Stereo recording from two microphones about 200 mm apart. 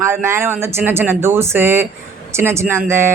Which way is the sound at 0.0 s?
15° right (ahead or behind).